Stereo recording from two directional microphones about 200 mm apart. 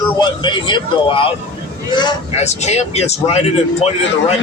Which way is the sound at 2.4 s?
35° left (ahead or behind).